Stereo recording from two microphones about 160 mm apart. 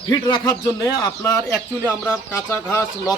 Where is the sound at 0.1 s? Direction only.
25° left (ahead or behind).